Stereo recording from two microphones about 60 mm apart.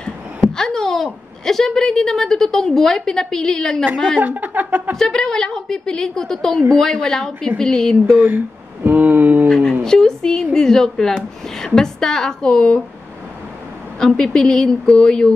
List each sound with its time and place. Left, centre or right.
0.5 s a woman's voice: centre
4.2 s speech: right
4.9 s a woman's voice: centre
8.2 s a sound: right
9.5 s a woman's voice: centre
13.9 s a woman's voice: centre